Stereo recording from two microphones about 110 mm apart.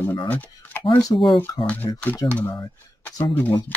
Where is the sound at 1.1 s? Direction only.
45° left (ahead or behind).